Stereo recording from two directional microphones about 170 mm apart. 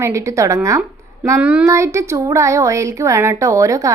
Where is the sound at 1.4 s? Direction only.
5° right (ahead or behind).